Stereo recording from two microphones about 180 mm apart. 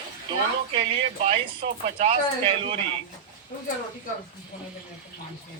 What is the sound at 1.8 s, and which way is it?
Speech, 35° right (ahead or behind).